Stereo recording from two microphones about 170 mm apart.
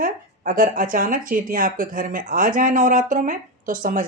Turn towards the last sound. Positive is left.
turn(degrees=-50)  # may be behind; listen again after turning